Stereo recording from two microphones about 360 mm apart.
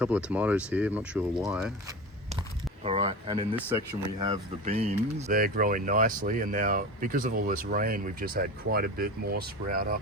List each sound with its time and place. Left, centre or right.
0.0 s speech: centre
2.8 s speech: centre